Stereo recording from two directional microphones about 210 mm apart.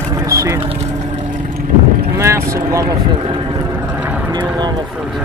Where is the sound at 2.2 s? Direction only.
15° right (ahead or behind).